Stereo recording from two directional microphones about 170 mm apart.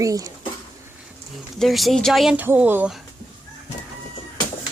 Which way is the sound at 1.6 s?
Centre (ahead or behind).